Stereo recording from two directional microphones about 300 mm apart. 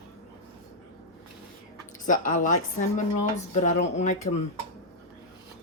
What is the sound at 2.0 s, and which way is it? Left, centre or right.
Speech, left.